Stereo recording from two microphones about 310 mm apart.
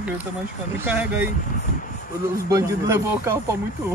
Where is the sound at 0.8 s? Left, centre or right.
Centre.